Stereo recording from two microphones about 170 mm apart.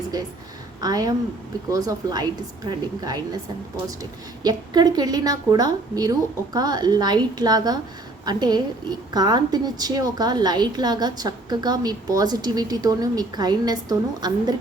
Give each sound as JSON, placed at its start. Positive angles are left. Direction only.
{"t": 0.8, "sound": "a woman's voice", "side_deg": -20}
{"t": 4.4, "sound": "a woman's voice", "side_deg": -25}